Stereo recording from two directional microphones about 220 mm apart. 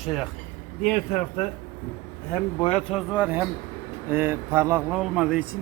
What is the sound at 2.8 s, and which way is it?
A man's voice, centre (ahead or behind).